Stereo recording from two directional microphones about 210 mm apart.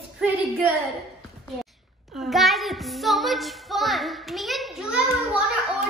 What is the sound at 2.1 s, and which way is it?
Child singing, centre (ahead or behind).